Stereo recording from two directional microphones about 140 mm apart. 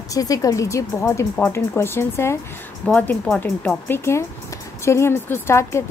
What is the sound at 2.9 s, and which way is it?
Speech, 10° left (ahead or behind).